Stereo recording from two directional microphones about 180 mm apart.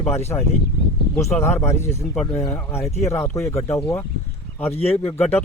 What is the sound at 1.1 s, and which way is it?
Speech, 15° left (ahead or behind).